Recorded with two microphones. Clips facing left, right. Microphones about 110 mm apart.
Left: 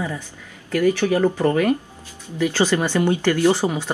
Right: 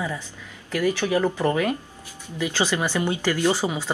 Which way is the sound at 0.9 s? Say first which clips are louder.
Left 4 dB; 15° right (ahead or behind).